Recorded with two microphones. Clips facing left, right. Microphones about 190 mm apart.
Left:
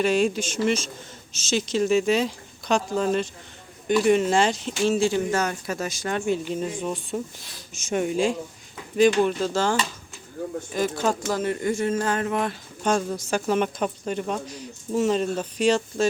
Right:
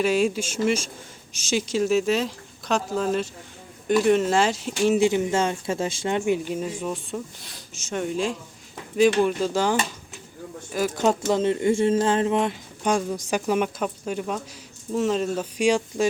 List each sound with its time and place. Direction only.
0.0 s speech: 5° right (ahead or behind)
7.7 s speech: 15° left (ahead or behind)
9.2 s speech: 10° right (ahead or behind)
10.9 s speech: 20° right (ahead or behind)
12.8 s speech: 10° right (ahead or behind)